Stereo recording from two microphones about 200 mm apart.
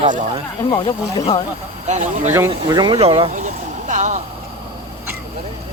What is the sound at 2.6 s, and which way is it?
Speech, 25° right (ahead or behind).